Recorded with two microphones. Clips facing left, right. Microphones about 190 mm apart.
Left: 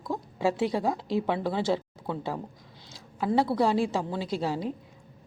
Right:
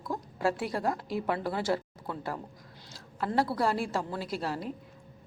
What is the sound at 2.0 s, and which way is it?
Speech, 20° left (ahead or behind).